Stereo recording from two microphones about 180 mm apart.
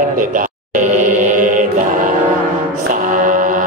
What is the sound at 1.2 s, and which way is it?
Music, 45° right (ahead or behind).